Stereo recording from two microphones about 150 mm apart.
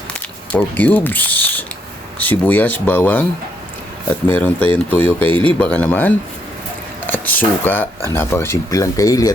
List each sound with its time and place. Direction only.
0.1 s speech: 10° left (ahead or behind)
4.3 s speech: 10° left (ahead or behind)